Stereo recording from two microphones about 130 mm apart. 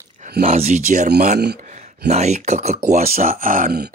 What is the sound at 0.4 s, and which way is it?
Speech, 55° right (ahead or behind).